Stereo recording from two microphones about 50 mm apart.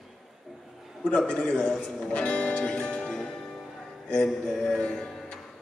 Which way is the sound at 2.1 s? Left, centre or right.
Left.